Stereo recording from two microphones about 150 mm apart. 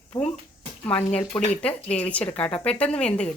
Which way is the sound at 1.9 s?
10° left (ahead or behind).